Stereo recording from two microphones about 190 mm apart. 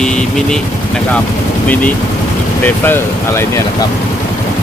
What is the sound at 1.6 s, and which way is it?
Speech, 10° left (ahead or behind).